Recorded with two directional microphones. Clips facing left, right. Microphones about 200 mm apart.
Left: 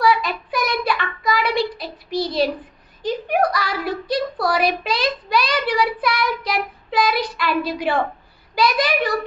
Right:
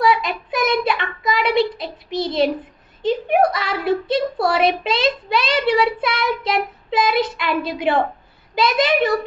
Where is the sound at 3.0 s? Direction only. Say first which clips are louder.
Right 3 dB; 25° right (ahead or behind).